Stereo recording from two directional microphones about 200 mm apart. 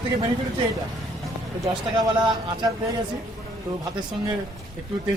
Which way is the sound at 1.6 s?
20° right (ahead or behind).